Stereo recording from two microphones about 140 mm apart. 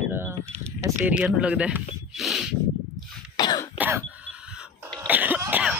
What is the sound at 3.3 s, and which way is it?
Cough, 30° left (ahead or behind).